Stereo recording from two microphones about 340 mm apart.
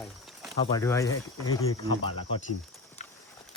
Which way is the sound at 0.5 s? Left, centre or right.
Centre.